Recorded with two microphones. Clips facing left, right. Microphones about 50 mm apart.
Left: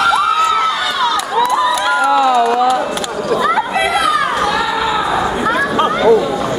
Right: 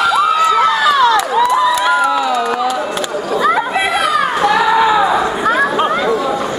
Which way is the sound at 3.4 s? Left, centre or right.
Centre.